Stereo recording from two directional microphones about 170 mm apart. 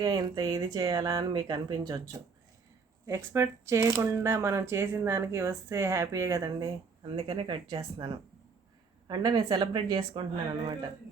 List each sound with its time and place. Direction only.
0.0 s speech: 25° right (ahead or behind)
7.2 s speech: 30° right (ahead or behind)